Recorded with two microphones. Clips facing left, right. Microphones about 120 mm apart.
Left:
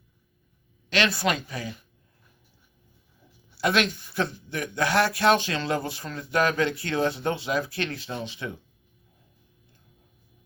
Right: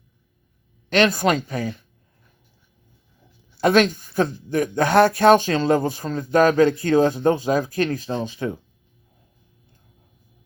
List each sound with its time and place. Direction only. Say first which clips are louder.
0.9 s speech: right 7 dB; 50° right (ahead or behind)
3.6 s speech: right 8 dB; 45° right (ahead or behind)